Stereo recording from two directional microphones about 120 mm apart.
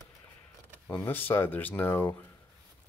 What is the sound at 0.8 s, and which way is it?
Speech, 15° left (ahead or behind).